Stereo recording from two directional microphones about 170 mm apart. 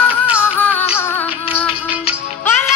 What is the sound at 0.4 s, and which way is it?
Music, 10° left (ahead or behind).